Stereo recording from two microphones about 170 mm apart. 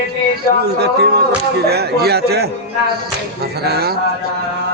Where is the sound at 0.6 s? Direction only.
75° right (ahead or behind).